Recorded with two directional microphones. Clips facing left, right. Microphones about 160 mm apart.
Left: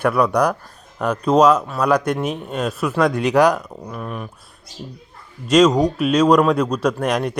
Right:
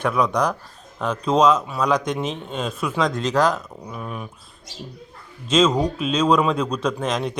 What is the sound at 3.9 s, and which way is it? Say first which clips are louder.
Speech: left 2 dB; centre (ahead or behind).